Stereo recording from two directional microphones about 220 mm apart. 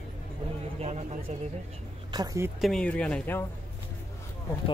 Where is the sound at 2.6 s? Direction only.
5° left (ahead or behind).